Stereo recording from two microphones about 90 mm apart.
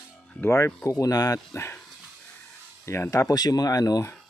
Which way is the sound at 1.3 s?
30° left (ahead or behind).